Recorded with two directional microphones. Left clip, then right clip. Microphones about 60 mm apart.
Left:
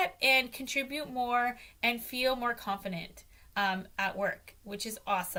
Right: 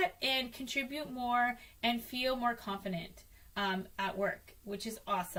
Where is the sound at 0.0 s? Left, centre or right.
Left.